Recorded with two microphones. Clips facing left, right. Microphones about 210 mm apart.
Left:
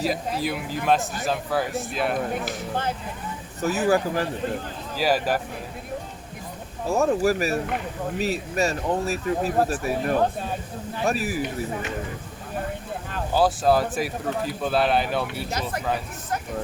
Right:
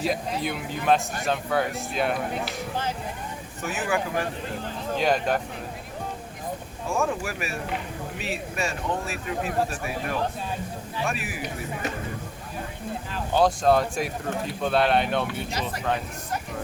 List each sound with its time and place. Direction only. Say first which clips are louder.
0.0 s speech: left 1 dB; centre (ahead or behind)
2.4 s speech: left 2 dB; 55° left (ahead or behind)
3.6 s speech: left 6 dB; 40° left (ahead or behind)
4.9 s speech: left 1 dB; 5° left (ahead or behind)
6.8 s speech: left 7 dB; 40° left (ahead or behind)
13.3 s speech: even; 5° left (ahead or behind)